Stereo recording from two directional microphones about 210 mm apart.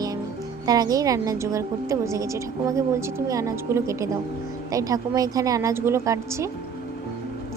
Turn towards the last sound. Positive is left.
turn(degrees=-15)  # may be behind; listen again after turning